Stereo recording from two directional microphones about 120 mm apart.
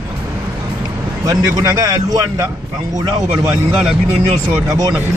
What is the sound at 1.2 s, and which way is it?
A man's voice, 30° right (ahead or behind).